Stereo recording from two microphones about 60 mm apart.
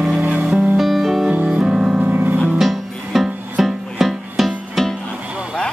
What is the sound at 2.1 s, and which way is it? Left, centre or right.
Music, right.